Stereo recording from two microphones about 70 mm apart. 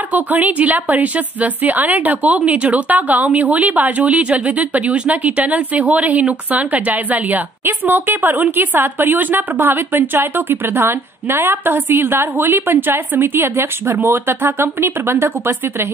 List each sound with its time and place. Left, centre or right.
0.1 s a woman's voice: right